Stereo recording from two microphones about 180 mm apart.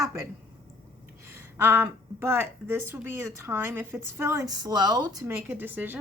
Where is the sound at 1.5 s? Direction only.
15° right (ahead or behind).